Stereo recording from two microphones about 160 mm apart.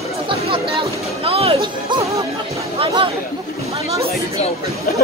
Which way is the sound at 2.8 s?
30° right (ahead or behind).